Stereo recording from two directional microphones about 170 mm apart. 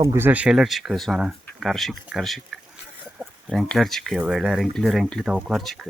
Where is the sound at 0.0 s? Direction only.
15° right (ahead or behind).